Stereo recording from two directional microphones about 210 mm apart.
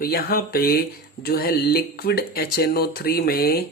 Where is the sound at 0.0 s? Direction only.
45° left (ahead or behind).